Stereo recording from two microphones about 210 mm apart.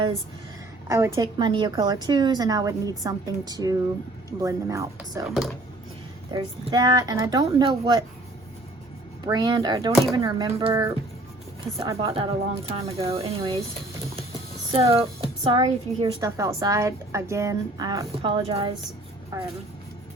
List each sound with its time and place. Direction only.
0.9 s a woman's voice: 15° right (ahead or behind)
6.3 s a woman's voice: 20° right (ahead or behind)
9.2 s a woman's voice: 20° right (ahead or behind)
14.7 s a woman's voice: 25° right (ahead or behind)